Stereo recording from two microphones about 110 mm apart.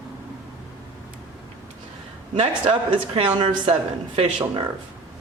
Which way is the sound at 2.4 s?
65° right (ahead or behind).